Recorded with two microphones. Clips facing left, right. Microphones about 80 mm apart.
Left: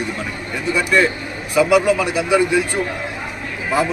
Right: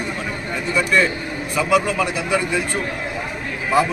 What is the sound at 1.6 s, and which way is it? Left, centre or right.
Speech, centre.